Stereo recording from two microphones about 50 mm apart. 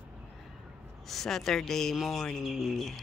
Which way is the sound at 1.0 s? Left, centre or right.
Centre.